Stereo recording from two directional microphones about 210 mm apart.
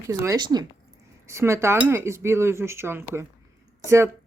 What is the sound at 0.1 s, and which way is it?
Speech, 15° right (ahead or behind).